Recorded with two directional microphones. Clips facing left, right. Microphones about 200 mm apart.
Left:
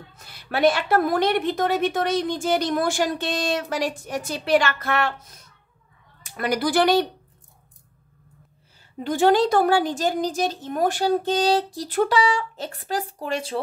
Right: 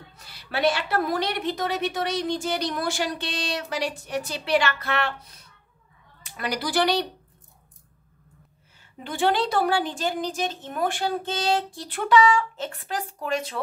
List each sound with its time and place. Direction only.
0.1 s a woman's voice: 50° left (ahead or behind)
8.9 s a woman's voice: 40° left (ahead or behind)